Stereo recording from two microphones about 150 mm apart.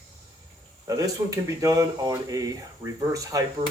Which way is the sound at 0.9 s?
20° right (ahead or behind).